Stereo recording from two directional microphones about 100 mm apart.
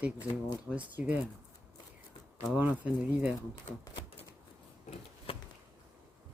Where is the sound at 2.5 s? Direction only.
15° right (ahead or behind).